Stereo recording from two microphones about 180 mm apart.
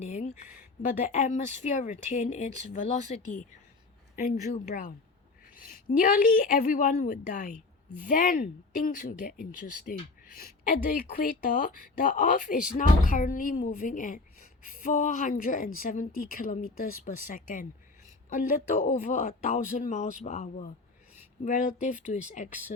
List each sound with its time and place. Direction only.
0.0 s speech: 40° left (ahead or behind)